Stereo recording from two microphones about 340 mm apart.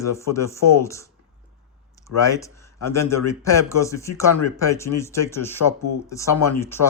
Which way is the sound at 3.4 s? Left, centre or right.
Centre.